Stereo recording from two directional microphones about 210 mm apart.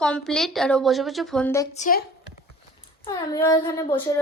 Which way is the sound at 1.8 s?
40° left (ahead or behind).